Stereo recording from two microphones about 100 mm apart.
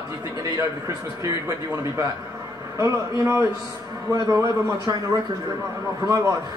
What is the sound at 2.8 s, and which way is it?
Speech, 25° right (ahead or behind).